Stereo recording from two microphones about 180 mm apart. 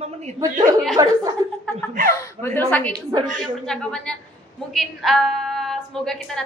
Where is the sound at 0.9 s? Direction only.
20° right (ahead or behind).